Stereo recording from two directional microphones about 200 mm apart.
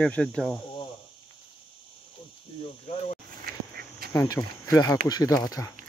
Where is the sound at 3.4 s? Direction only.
50° right (ahead or behind).